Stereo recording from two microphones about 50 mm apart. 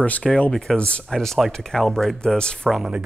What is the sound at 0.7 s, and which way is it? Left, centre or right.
Speech, left.